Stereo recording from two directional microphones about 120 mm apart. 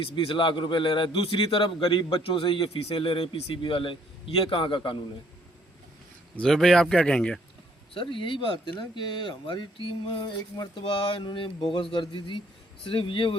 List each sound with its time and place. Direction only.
0.0 s a man's voice: 50° left (ahead or behind)
6.3 s speech: 5° left (ahead or behind)
7.9 s a man's voice: 45° left (ahead or behind)